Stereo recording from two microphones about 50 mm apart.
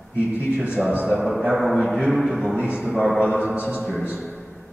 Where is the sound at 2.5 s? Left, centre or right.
Right.